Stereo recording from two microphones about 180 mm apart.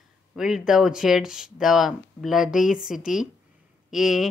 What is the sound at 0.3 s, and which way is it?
Speech, centre (ahead or behind).